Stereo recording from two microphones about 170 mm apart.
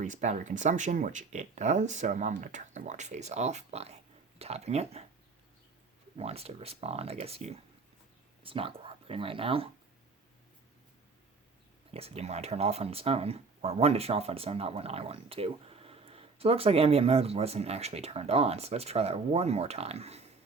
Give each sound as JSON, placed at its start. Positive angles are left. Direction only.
{"t": 0.0, "sound": "speech", "side_deg": -45}
{"t": 6.1, "sound": "speech", "side_deg": -35}
{"t": 11.9, "sound": "speech", "side_deg": -35}